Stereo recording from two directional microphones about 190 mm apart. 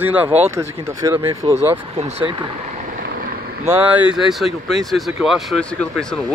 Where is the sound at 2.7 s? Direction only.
50° right (ahead or behind).